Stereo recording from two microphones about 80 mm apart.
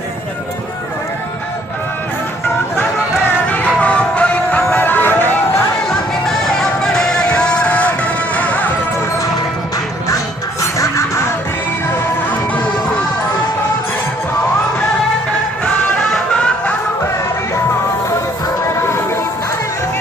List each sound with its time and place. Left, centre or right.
3.4 s music: centre
5.9 s music: centre
10.6 s music: left
15.6 s music: centre
18.8 s music: left